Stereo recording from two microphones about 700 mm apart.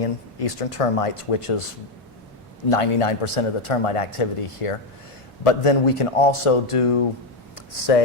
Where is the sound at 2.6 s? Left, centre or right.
Left.